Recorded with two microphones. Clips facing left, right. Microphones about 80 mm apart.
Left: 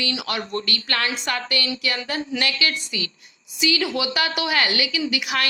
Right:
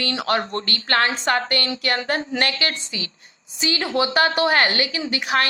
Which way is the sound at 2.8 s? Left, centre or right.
Right.